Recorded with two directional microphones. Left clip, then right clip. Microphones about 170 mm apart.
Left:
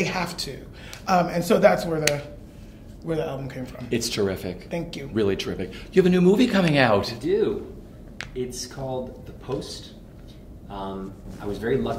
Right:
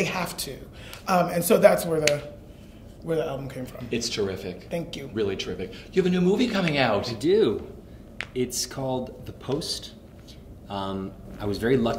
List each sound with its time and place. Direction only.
0.0 s speech: centre (ahead or behind)
3.9 s speech: 30° left (ahead or behind)
4.6 s speech: centre (ahead or behind)
5.1 s speech: 30° left (ahead or behind)
7.2 s speech: 30° right (ahead or behind)
10.7 s speech: 30° right (ahead or behind)